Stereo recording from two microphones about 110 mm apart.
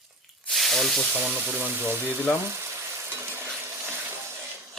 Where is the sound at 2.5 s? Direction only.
25° right (ahead or behind).